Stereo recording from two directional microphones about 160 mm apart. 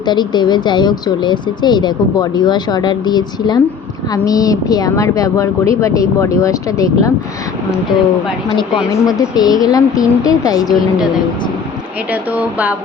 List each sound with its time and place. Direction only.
0.0 s speech: 25° left (ahead or behind)
8.9 s speech: 25° left (ahead or behind)
12.1 s speech: 10° right (ahead or behind)